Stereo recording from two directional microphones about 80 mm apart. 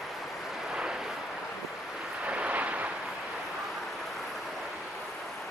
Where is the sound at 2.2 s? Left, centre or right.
Centre.